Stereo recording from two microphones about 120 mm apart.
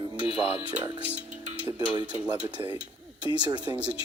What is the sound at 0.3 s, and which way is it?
Speech, 55° left (ahead or behind).